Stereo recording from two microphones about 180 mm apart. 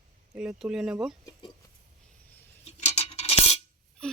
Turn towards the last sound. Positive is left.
turn(degrees=5)  # may be behind; listen again after turning